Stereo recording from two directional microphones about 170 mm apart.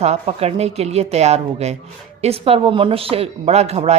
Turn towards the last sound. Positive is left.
turn(degrees=-40)  # may be behind; listen again after turning